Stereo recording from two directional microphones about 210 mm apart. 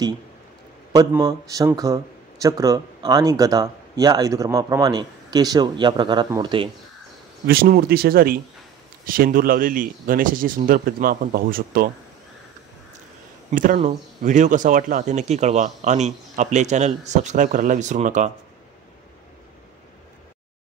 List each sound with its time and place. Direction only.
0.9 s speech: 15° right (ahead or behind)
7.4 s speech: 45° right (ahead or behind)
13.5 s speech: 35° right (ahead or behind)